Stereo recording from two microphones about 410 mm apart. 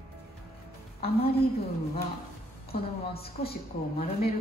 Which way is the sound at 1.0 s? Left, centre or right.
Centre.